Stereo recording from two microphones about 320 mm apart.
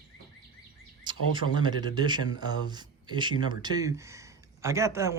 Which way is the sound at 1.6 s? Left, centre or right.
Centre.